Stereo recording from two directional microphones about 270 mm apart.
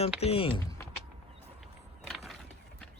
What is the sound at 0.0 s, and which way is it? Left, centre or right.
Speech, left.